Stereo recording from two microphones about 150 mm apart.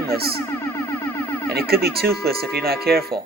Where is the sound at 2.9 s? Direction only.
5° left (ahead or behind).